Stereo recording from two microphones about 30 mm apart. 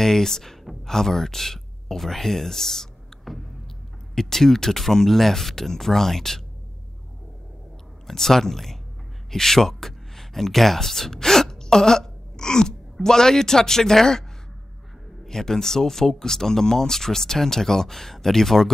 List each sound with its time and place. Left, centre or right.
0.0 s speech: centre
3.3 s a sound: centre
4.1 s speech: centre
8.1 s speech: centre
15.2 s speech: centre